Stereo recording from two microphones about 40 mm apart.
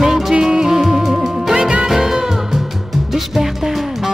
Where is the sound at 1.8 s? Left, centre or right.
Centre.